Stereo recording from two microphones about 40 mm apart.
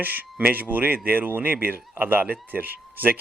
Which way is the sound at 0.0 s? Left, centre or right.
Right.